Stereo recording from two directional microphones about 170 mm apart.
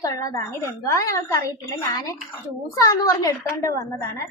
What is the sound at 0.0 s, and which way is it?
A woman's voice, 20° left (ahead or behind).